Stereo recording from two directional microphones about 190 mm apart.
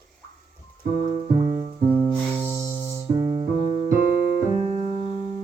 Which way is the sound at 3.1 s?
25° right (ahead or behind).